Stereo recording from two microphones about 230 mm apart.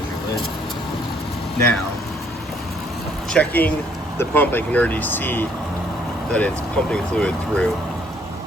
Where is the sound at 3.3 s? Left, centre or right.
Centre.